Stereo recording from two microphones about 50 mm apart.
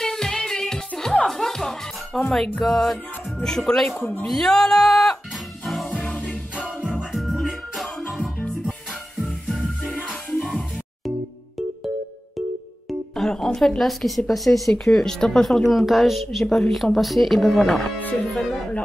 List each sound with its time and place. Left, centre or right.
0.0 s music: centre
2.6 s speech: centre
3.4 s music: centre
3.9 s speech: left
4.3 s music: centre
7.1 s music: centre
13.1 s a woman's voice: centre
18.2 s music: centre